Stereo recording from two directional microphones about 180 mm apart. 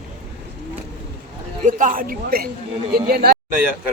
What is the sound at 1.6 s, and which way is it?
A woman's voice, 45° right (ahead or behind).